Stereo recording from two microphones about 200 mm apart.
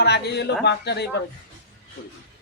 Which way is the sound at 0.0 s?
55° left (ahead or behind).